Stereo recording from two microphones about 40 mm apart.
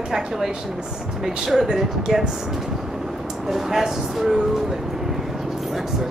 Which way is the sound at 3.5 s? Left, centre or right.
Centre.